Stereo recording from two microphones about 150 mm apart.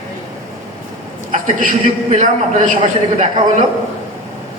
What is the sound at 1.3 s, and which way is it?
A man's voice, 60° right (ahead or behind).